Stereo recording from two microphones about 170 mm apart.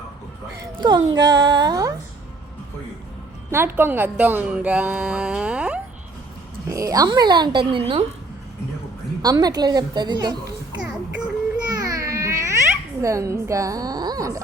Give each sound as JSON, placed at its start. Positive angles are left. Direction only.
{"t": 0.8, "sound": "a woman's voice", "side_deg": -25}
{"t": 3.5, "sound": "speech", "side_deg": -15}
{"t": 6.7, "sound": "a woman's voice", "side_deg": -20}
{"t": 9.2, "sound": "a woman's voice", "side_deg": -20}
{"t": 11.7, "sound": "baby cry", "side_deg": -20}
{"t": 13.0, "sound": "a woman's voice", "side_deg": -20}